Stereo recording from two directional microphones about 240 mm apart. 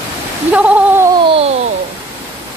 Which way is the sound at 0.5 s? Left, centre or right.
Centre.